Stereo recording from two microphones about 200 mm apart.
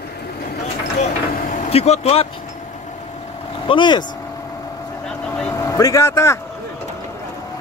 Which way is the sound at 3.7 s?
25° left (ahead or behind).